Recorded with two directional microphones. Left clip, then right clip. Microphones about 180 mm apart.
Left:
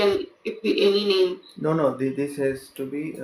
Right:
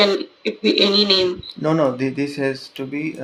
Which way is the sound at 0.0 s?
45° right (ahead or behind).